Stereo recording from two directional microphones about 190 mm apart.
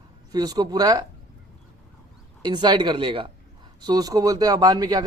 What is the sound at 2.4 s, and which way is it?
A man's voice, 25° right (ahead or behind).